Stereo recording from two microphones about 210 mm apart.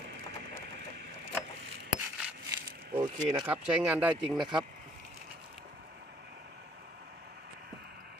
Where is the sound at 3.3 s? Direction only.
10° right (ahead or behind).